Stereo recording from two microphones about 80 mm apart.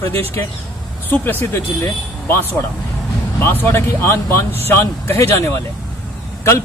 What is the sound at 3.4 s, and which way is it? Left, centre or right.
Speech, left.